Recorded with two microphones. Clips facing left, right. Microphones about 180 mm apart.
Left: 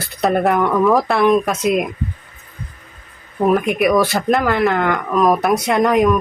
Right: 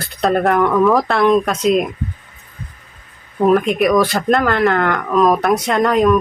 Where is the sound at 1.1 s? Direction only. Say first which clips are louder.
Even; 15° left (ahead or behind).